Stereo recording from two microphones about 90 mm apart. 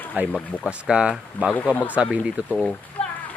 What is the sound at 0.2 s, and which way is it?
Speech, 20° right (ahead or behind).